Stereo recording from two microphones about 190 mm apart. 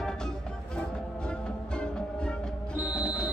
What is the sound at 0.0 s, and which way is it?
Music, 5° left (ahead or behind).